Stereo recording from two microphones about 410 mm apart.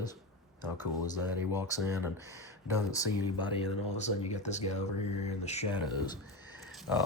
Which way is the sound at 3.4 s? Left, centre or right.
Centre.